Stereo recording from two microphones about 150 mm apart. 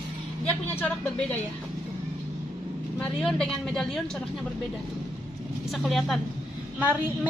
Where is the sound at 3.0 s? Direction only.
5° left (ahead or behind).